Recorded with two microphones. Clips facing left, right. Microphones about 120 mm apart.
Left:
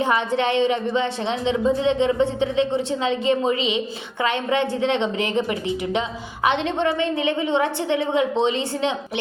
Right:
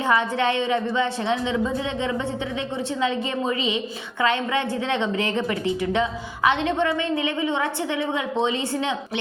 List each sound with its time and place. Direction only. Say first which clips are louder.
0.0 s a woman's voice: left 1 dB; 25° left (ahead or behind)